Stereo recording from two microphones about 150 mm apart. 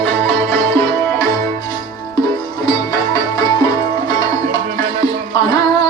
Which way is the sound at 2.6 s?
25° left (ahead or behind).